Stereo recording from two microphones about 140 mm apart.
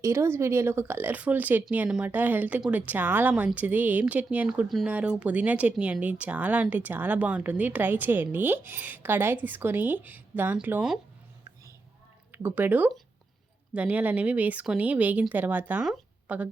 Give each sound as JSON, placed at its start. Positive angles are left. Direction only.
{"t": 0.0, "sound": "speech", "side_deg": -20}
{"t": 12.3, "sound": "speech", "side_deg": -15}
{"t": 15.9, "sound": "a sound", "side_deg": -10}